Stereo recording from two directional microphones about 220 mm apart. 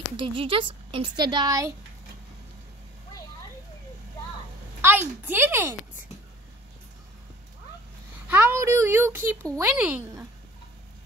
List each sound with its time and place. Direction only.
0.2 s a woman's voice: 25° right (ahead or behind)
4.8 s speech: 10° right (ahead or behind)
8.3 s a child's voice: 10° right (ahead or behind)